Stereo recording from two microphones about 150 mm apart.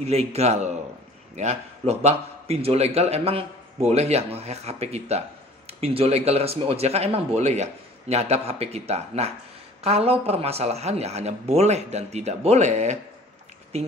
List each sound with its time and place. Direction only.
0.0 s a man's voice: 45° right (ahead or behind)